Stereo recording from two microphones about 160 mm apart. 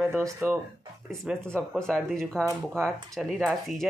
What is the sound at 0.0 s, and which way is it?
Speech, 15° right (ahead or behind).